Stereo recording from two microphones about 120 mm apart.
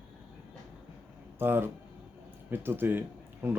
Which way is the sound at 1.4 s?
20° right (ahead or behind).